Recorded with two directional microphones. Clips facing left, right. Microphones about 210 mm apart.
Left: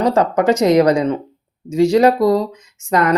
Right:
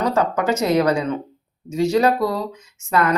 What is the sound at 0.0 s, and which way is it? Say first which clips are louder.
Speech: left 5 dB; 35° left (ahead or behind).